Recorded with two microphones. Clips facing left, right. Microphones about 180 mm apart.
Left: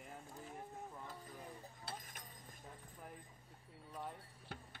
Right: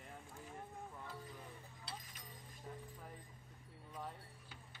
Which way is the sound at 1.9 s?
50° left (ahead or behind).